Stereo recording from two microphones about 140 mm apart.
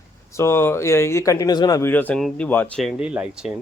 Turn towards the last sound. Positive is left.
turn(degrees=-5)  # may be behind; listen again after turning